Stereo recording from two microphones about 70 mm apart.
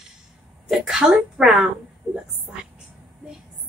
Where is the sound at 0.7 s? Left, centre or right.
Centre.